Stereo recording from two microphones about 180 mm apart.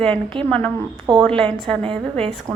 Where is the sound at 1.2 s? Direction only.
5° left (ahead or behind).